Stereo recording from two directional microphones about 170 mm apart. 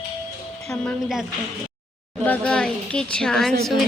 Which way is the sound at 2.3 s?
5° left (ahead or behind).